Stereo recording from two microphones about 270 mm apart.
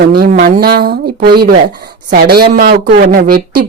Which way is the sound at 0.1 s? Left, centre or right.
Right.